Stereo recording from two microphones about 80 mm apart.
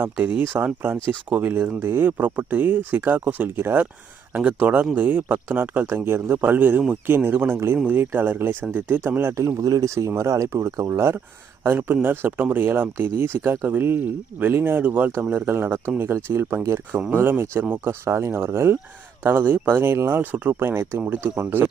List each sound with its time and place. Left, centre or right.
0.0 s speech: right